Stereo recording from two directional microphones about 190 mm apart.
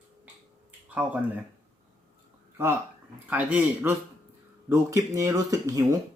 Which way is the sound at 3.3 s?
5° right (ahead or behind).